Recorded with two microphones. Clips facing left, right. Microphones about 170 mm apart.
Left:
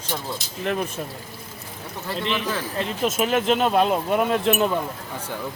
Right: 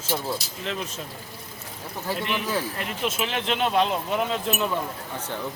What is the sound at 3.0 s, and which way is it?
Speech, 45° left (ahead or behind).